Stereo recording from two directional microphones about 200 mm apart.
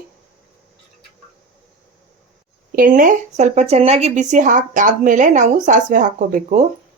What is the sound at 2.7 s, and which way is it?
Speech, 45° right (ahead or behind).